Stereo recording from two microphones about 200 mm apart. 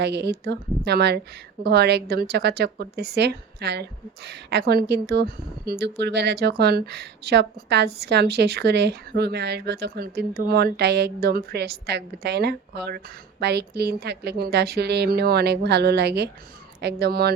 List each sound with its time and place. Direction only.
0.0 s a woman's voice: 55° right (ahead or behind)